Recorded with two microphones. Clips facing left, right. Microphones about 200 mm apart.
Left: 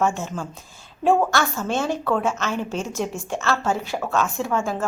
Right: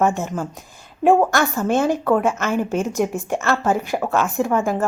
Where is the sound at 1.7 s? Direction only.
15° right (ahead or behind).